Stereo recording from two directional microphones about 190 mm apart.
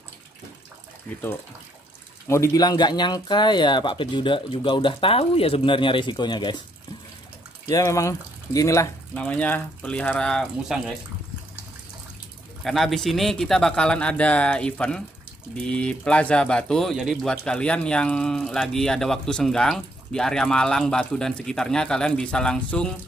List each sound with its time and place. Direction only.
2.2 s speech: 15° left (ahead or behind)
7.6 s speech: 15° left (ahead or behind); by 11.0 s centre (ahead or behind)
12.6 s speech: centre (ahead or behind)